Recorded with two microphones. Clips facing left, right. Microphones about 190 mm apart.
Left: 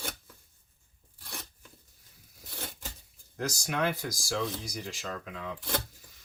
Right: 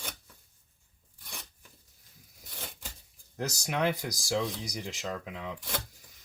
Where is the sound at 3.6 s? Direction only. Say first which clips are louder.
Right 2 dB; 20° right (ahead or behind).